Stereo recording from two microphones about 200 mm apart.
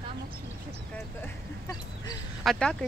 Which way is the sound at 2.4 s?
Centre (ahead or behind).